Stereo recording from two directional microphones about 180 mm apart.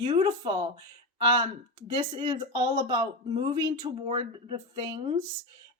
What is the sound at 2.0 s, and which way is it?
Speech, 25° right (ahead or behind).